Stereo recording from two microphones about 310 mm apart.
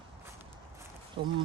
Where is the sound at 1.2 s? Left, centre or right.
Centre.